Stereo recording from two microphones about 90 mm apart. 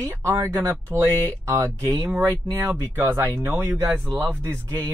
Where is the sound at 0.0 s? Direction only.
30° right (ahead or behind).